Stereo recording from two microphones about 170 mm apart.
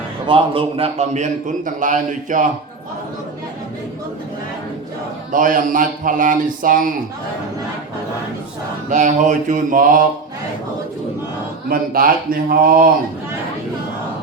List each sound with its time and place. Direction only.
0.3 s a man's voice: 30° right (ahead or behind); by 2.5 s 50° right (ahead or behind)
5.3 s a man's voice: 50° right (ahead or behind)
8.9 s a man's voice: 45° right (ahead or behind)
11.7 s a man's voice: 60° right (ahead or behind)